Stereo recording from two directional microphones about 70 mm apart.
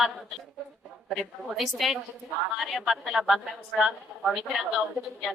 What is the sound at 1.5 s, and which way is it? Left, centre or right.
A woman's voice, centre.